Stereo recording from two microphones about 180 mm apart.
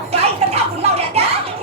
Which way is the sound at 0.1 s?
35° right (ahead or behind).